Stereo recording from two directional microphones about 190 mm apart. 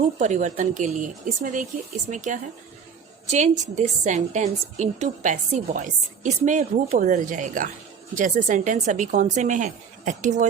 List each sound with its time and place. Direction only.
0.2 s a woman's voice: 40° right (ahead or behind)